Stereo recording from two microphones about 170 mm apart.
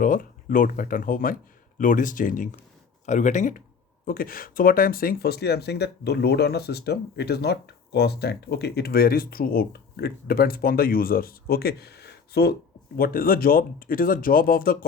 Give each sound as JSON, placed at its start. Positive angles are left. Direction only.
{"t": 0.0, "sound": "speech", "side_deg": 55}
{"t": 4.0, "sound": "speech", "side_deg": 60}
{"t": 13.0, "sound": "speech", "side_deg": 60}